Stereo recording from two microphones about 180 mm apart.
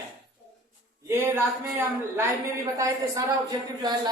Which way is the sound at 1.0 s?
15° right (ahead or behind).